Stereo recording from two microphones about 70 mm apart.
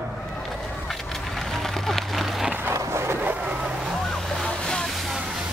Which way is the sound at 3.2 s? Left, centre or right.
Right.